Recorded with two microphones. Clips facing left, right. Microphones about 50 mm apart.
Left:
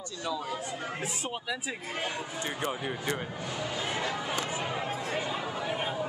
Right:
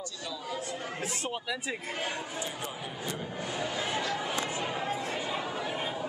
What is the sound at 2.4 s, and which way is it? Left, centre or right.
Speech, left.